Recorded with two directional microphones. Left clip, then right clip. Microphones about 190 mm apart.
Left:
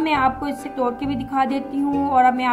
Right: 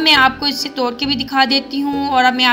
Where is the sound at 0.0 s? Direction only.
15° right (ahead or behind).